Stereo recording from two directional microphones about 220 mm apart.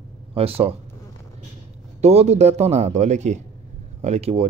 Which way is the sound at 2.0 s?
30° right (ahead or behind).